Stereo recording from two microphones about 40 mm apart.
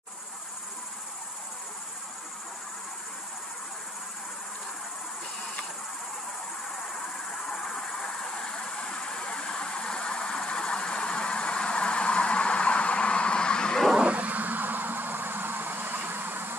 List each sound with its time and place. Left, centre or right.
7.4 s vehicle: centre
14.0 s vehicle: right